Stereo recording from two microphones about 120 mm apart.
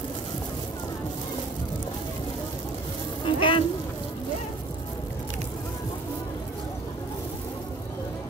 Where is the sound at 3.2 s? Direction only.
45° left (ahead or behind).